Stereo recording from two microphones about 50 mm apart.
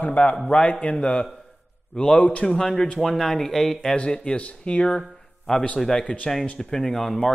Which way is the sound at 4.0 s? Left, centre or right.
Left.